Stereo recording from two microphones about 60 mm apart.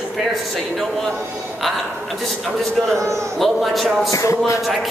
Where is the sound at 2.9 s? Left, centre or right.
Right.